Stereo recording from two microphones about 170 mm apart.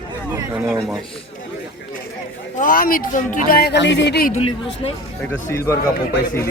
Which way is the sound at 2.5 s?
55° left (ahead or behind).